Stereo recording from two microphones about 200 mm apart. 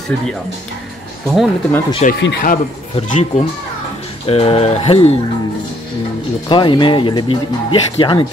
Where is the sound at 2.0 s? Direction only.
35° left (ahead or behind).